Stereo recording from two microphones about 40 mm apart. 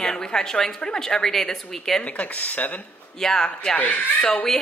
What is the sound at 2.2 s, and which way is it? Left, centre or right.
Speech, left.